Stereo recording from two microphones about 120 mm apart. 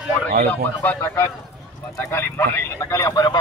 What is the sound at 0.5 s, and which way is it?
Speech, 15° left (ahead or behind).